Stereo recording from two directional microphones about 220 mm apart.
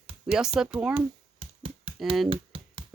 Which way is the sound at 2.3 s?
25° right (ahead or behind).